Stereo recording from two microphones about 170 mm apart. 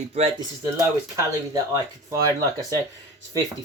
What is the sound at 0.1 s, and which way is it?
Speech, 35° right (ahead or behind).